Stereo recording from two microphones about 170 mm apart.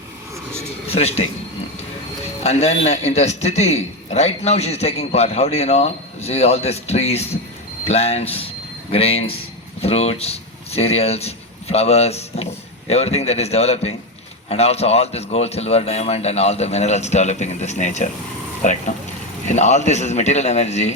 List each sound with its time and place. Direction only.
0.9 s a man's voice: 40° left (ahead or behind)
19.5 s a man's voice: 45° left (ahead or behind)